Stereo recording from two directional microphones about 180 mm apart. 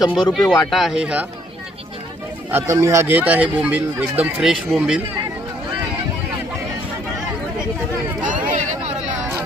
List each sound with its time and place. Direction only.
0.1 s speech: centre (ahead or behind)
2.5 s speech: 15° right (ahead or behind)
8.3 s hubbub: 45° right (ahead or behind)